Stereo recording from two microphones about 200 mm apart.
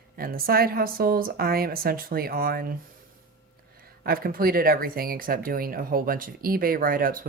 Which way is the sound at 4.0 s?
45° right (ahead or behind).